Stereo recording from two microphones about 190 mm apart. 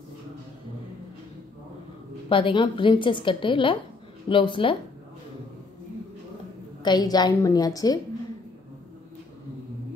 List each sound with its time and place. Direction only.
2.2 s a woman's voice: 25° left (ahead or behind)
6.8 s a woman's voice: 20° left (ahead or behind)